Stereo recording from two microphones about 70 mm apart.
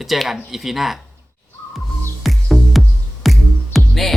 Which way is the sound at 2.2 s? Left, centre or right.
Centre.